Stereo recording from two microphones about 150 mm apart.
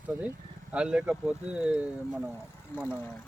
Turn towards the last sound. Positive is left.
turn(degrees=15)  # may be behind; listen again after turning